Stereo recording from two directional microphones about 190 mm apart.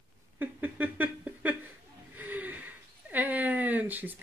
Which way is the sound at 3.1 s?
10° right (ahead or behind).